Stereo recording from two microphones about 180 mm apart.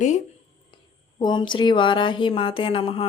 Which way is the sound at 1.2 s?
25° left (ahead or behind).